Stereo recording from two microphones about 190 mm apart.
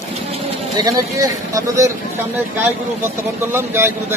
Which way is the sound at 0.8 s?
15° right (ahead or behind).